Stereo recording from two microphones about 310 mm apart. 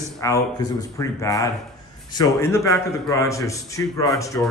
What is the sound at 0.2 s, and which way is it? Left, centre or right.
Speech, centre.